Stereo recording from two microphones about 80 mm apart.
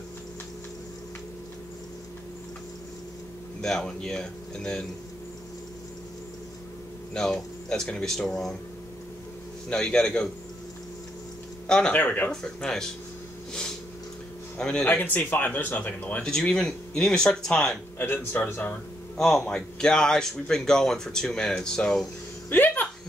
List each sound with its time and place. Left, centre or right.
3.6 s speech: centre
7.2 s speech: centre
9.7 s speech: centre
11.6 s a sound: centre
11.9 s speech: left
12.6 s speech: centre
14.6 s speech: centre
14.9 s speech: left
16.3 s speech: centre
17.9 s speech: left
19.1 s speech: centre
22.5 s speech: left